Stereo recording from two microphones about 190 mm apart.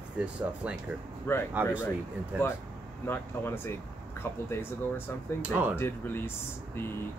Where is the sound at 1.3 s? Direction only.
10° left (ahead or behind).